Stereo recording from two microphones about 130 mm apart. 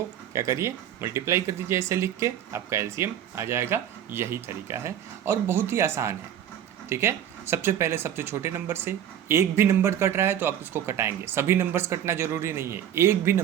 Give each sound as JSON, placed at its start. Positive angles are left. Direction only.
{"t": 0.3, "sound": "speech", "side_deg": -20}